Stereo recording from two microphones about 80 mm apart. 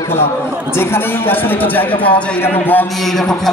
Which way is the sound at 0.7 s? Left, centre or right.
Left.